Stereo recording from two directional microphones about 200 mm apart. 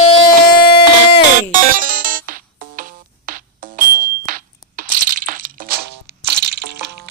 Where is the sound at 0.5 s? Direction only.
50° left (ahead or behind).